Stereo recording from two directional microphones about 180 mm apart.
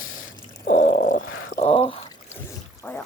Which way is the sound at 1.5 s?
35° left (ahead or behind).